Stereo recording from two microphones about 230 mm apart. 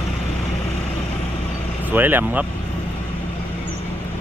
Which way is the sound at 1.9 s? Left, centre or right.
Centre.